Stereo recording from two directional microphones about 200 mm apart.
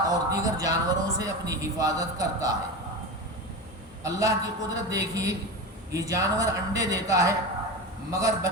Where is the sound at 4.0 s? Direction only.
15° right (ahead or behind).